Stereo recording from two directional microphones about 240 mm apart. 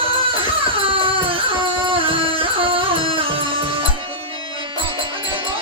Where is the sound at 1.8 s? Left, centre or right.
Right.